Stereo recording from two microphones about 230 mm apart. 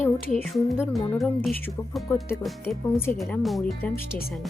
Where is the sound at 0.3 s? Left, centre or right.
Centre.